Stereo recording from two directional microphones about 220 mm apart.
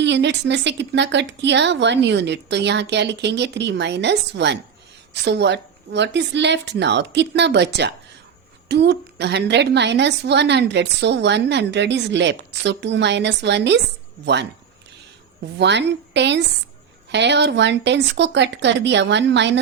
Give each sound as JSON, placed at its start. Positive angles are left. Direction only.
{"t": 0.0, "sound": "a woman's voice", "side_deg": -50}
{"t": 15.5, "sound": "a woman's voice", "side_deg": -50}